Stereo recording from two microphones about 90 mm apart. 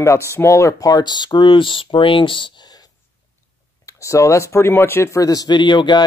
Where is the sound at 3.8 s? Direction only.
35° left (ahead or behind).